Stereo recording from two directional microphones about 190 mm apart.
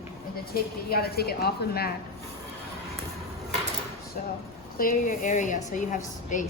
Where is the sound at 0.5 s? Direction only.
55° left (ahead or behind).